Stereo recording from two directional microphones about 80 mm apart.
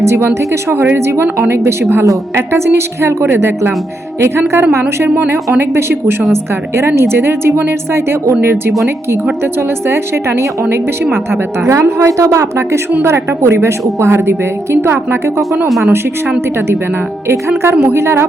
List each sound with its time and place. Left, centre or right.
0.0 s a woman's voice: right
17.6 s a woman's voice: right